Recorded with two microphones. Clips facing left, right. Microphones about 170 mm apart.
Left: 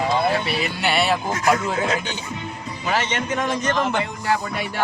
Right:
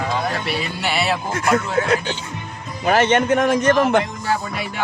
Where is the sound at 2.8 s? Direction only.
55° right (ahead or behind).